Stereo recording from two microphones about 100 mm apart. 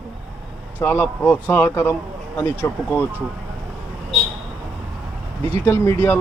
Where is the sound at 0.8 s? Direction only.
20° left (ahead or behind).